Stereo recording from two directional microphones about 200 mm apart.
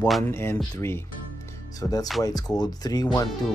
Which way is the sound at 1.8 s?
20° left (ahead or behind).